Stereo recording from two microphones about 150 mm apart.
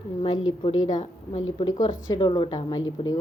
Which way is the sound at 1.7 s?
25° left (ahead or behind).